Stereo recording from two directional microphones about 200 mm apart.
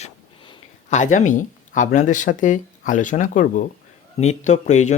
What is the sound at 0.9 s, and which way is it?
Speech, 35° left (ahead or behind).